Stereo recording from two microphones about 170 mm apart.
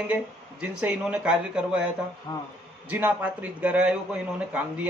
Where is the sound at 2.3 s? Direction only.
25° left (ahead or behind).